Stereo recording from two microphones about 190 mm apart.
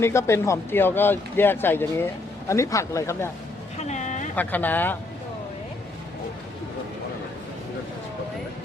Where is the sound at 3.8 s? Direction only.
40° left (ahead or behind).